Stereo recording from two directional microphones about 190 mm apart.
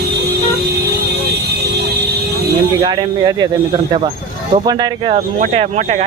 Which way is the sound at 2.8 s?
25° right (ahead or behind).